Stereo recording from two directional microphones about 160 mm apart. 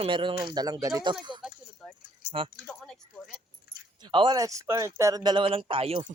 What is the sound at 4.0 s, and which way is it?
Speech, 30° right (ahead or behind).